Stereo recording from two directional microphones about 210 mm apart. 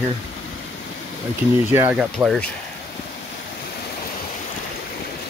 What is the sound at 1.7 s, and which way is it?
Speech, 5° right (ahead or behind).